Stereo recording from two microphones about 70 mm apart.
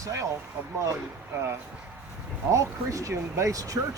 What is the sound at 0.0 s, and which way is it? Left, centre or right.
Speech, right.